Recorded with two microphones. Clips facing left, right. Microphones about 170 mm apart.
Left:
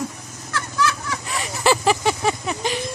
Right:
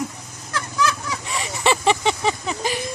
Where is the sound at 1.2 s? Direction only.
Centre (ahead or behind).